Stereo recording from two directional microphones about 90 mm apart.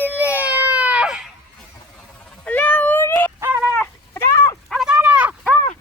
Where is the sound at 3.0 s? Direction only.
20° left (ahead or behind).